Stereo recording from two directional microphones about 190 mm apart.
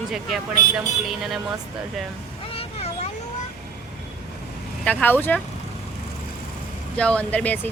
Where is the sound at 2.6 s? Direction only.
35° left (ahead or behind).